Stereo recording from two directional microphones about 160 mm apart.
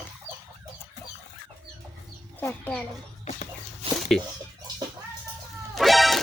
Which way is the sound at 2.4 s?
10° left (ahead or behind).